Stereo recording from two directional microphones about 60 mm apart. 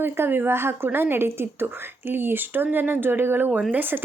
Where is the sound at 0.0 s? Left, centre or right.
Right.